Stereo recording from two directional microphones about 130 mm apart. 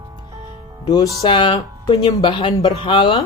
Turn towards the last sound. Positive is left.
turn(degrees=40)  # may be behind; listen again after turning